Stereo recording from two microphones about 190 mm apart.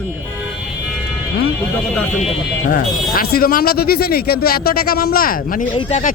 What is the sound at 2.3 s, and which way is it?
Speech, 45° left (ahead or behind).